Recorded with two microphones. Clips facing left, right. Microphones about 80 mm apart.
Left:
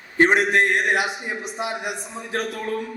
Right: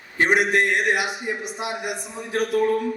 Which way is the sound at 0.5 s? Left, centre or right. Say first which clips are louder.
Left 1 dB; left.